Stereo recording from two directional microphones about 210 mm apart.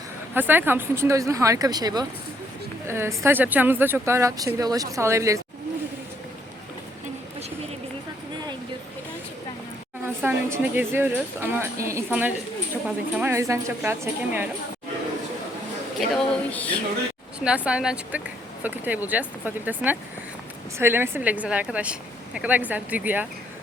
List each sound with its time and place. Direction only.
0.3 s speech: 10° right (ahead or behind)
10.2 s speech: 10° right (ahead or behind)
16.0 s speech: 5° left (ahead or behind)
17.4 s speech: 5° right (ahead or behind)